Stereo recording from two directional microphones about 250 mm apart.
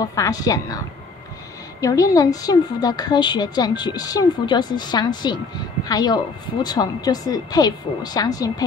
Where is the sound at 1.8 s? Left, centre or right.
Centre.